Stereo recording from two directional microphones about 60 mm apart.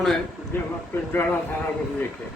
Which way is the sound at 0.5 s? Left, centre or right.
Left.